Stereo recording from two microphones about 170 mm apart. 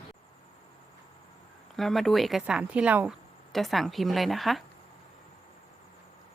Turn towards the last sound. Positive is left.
turn(degrees=0)  # may be behind; listen again after turning